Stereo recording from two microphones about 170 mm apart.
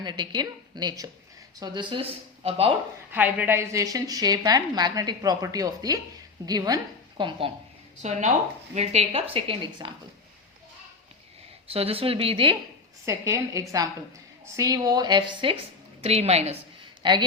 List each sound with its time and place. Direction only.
0.0 s a woman's voice: 25° right (ahead or behind)
3.1 s a woman's voice: 10° right (ahead or behind); by 7.5 s 30° right (ahead or behind)
8.0 s speech: 45° right (ahead or behind)
11.7 s speech: 35° right (ahead or behind)
13.1 s a woman's voice: 15° right (ahead or behind); by 16.6 s 40° right (ahead or behind)
17.0 s speech: 25° right (ahead or behind)